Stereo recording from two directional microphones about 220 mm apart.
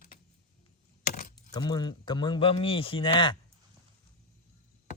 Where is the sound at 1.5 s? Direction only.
20° left (ahead or behind).